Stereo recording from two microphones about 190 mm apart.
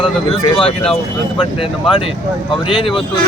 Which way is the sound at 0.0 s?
25° left (ahead or behind).